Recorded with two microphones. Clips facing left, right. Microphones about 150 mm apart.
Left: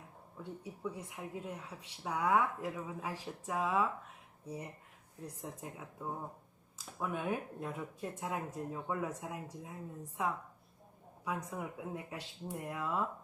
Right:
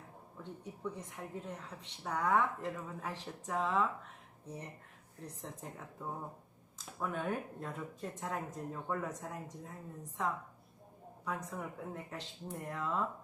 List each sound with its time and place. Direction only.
0.6 s a woman's voice: 10° left (ahead or behind)